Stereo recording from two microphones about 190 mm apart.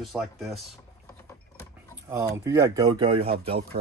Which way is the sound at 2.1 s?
15° right (ahead or behind).